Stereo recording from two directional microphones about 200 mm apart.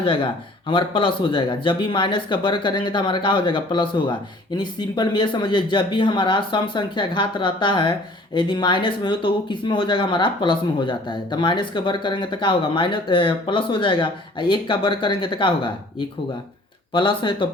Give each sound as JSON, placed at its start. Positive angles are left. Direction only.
{"t": 0.0, "sound": "speech", "side_deg": 25}